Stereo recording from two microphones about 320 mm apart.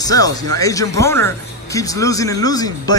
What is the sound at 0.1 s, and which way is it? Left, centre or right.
Speech, centre.